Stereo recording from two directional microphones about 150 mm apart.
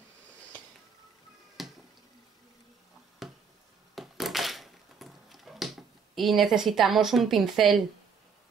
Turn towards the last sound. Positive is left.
turn(degrees=0)  # may be behind; listen again after turning